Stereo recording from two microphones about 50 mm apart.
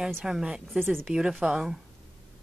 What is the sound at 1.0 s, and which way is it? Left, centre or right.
Speech, centre.